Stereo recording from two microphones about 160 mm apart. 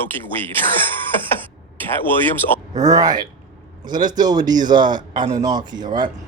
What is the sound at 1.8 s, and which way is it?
Speech, 10° left (ahead or behind).